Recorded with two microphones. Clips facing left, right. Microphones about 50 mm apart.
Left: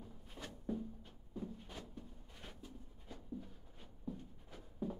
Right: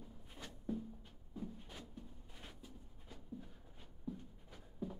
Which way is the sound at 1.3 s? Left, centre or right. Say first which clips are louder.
Left 2 dB; centre.